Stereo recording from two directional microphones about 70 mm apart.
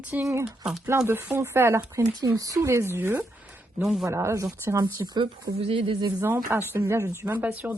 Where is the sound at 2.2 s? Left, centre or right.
Right.